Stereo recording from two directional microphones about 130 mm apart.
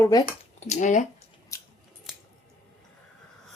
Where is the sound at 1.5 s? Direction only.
25° left (ahead or behind).